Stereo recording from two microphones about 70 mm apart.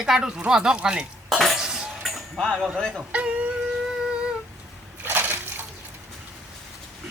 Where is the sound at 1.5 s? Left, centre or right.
Centre.